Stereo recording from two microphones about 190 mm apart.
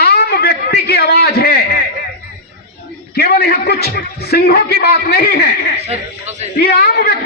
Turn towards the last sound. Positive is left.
turn(degrees=55)  # may be behind; listen again after turning